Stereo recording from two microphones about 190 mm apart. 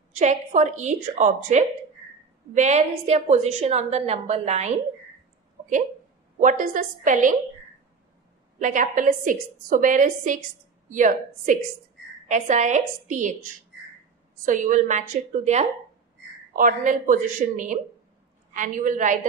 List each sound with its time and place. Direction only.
0.2 s a woman's voice: 40° right (ahead or behind)
5.6 s a sound: 40° right (ahead or behind)
6.4 s a woman's voice: 45° right (ahead or behind)
8.5 s a woman's voice: 40° right (ahead or behind)